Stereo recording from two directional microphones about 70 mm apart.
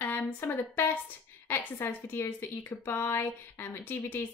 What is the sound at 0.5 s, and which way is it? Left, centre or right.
A woman's voice, left.